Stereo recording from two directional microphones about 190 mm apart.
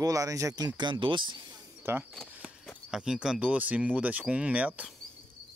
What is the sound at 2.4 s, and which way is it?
Speech, centre (ahead or behind).